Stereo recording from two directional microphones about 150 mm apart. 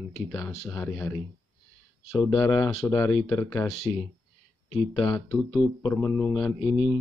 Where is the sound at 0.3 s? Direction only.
10° left (ahead or behind).